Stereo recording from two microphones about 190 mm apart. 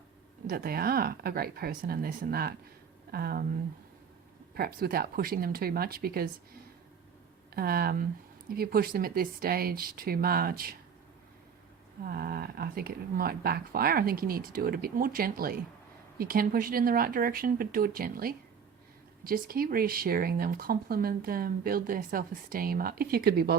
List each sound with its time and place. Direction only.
0.4 s speech: 50° right (ahead or behind)
4.5 s speech: 55° right (ahead or behind)
7.5 s speech: 55° right (ahead or behind)
12.0 s speech: 55° right (ahead or behind)